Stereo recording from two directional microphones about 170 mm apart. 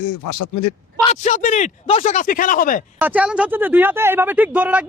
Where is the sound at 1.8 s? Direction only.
35° left (ahead or behind).